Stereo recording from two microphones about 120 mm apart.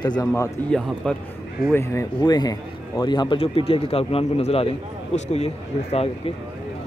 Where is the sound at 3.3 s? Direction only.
55° left (ahead or behind).